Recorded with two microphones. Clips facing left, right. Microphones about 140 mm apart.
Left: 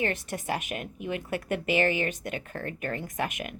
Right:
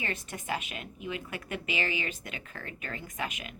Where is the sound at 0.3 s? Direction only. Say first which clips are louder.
Left 4 dB; 45° left (ahead or behind).